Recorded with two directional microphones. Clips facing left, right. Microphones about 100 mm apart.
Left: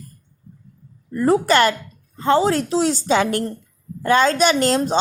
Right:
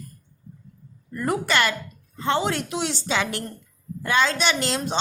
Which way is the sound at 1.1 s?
30° left (ahead or behind).